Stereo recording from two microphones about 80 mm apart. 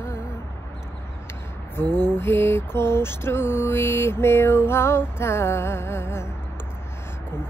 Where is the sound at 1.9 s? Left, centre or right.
Left.